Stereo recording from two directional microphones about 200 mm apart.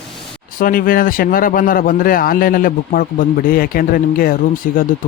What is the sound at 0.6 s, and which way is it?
A man's voice, 45° left (ahead or behind).